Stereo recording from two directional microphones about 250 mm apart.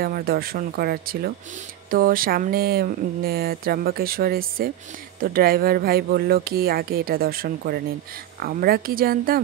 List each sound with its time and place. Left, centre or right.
0.0 s speech: right